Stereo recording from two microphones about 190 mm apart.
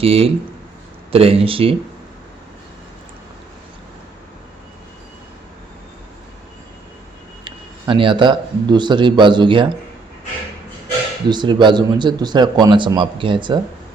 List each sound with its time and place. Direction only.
0.0 s speech: 30° right (ahead or behind)
7.4 s speech: 25° right (ahead or behind)
11.3 s speech: 25° right (ahead or behind)